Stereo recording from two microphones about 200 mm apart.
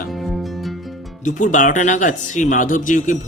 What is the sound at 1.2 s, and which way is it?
Speech, 40° left (ahead or behind).